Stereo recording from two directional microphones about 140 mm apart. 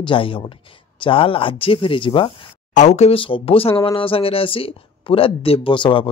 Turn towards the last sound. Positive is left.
turn(degrees=35)  # may be behind; listen again after turning